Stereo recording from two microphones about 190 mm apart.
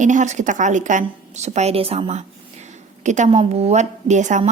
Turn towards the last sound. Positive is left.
turn(degrees=-40)  # may be behind; listen again after turning